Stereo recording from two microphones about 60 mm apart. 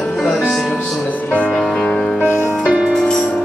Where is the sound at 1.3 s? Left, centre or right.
Left.